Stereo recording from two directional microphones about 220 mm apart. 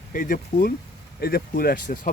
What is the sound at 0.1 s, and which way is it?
Speech, 35° left (ahead or behind).